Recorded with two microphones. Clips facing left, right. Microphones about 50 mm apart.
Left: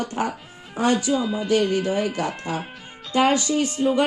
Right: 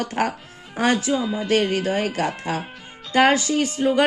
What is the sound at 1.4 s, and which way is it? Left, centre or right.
Speech, right.